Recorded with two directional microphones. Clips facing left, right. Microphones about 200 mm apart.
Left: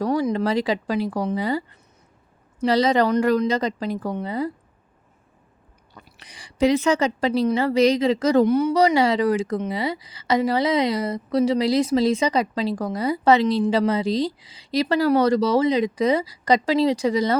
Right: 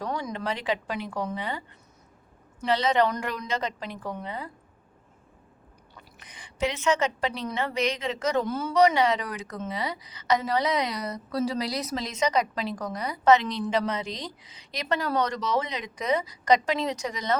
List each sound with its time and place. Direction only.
0.3 s a woman's voice: 35° left (ahead or behind)
2.6 s a woman's voice: 35° left (ahead or behind)
6.6 s a woman's voice: 35° left (ahead or behind)
8.4 s speech: 20° left (ahead or behind)
8.7 s a woman's voice: 30° left (ahead or behind)